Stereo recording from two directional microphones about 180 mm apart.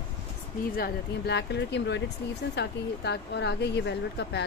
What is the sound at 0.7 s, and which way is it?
Speech, 60° left (ahead or behind).